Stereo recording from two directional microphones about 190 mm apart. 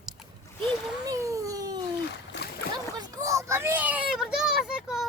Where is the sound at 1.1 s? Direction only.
15° right (ahead or behind).